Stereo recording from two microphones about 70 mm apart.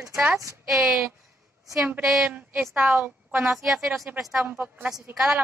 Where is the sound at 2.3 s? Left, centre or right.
Right.